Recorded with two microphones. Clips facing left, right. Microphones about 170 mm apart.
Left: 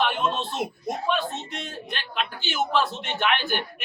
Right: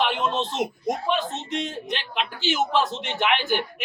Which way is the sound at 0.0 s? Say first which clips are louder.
Right 1 dB; 20° right (ahead or behind).